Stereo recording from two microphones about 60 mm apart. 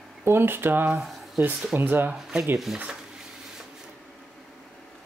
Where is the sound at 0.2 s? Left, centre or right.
Right.